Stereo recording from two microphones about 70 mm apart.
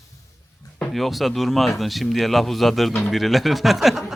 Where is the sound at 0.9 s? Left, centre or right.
Centre.